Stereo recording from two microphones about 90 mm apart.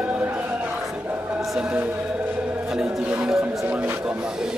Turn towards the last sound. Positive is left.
turn(degrees=-10)  # may be behind; listen again after turning